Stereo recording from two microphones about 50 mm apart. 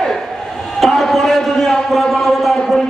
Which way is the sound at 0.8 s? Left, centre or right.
Centre.